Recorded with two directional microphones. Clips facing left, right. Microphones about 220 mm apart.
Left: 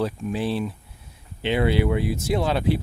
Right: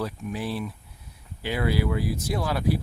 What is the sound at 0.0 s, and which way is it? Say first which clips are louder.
Speech: left 5 dB; 25° left (ahead or behind).